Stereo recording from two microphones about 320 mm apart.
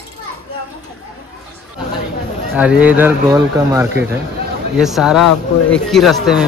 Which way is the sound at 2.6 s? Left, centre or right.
Centre.